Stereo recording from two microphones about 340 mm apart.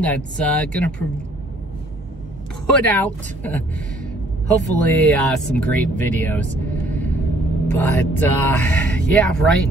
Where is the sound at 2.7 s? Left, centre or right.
Centre.